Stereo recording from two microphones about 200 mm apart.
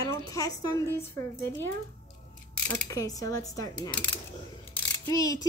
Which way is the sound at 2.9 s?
15° left (ahead or behind).